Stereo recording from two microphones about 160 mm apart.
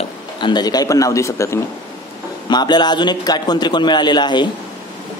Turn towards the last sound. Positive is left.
turn(degrees=30)  # may be behind; listen again after turning